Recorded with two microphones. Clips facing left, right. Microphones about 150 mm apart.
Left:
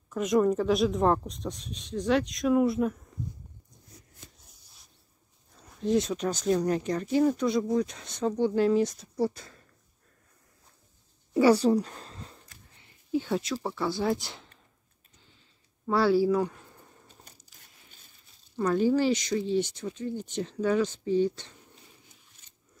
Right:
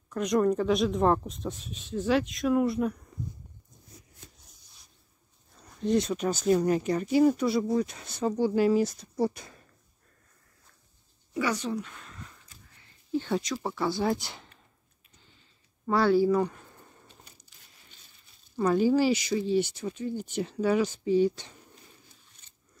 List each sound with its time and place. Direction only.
0.1 s speech: centre (ahead or behind)
5.6 s speech: centre (ahead or behind)
9.2 s speech: 15° right (ahead or behind)
11.3 s a sound: 35° left (ahead or behind)
13.1 s speech: 5° left (ahead or behind)
15.9 s speech: 5° left (ahead or behind)
18.6 s speech: 5° right (ahead or behind)